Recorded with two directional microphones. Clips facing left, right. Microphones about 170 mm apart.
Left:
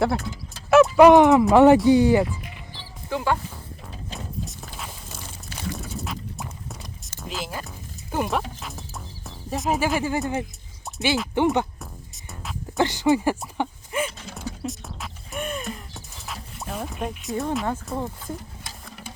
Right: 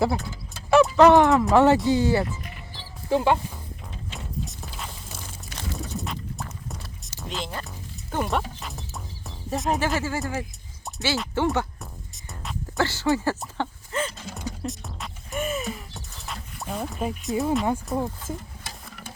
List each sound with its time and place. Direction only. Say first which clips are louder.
0.0 s speech: left 1 dB; centre (ahead or behind); by 2.2 s 15° left (ahead or behind)
3.1 s speech: right 4 dB; 25° right (ahead or behind)
4.2 s a sound: right 1 dB; centre (ahead or behind)
7.2 s speech: even; 5° left (ahead or behind)
11.8 s music: left 1 dB; centre (ahead or behind)
12.7 s speech: left 3 dB; 15° left (ahead or behind)
13.6 s a sound: left 2 dB; 10° left (ahead or behind)
14.2 s speech: right 1 dB; centre (ahead or behind)
14.6 s music: left 1 dB; centre (ahead or behind)
17.9 s speech: right 3 dB; centre (ahead or behind)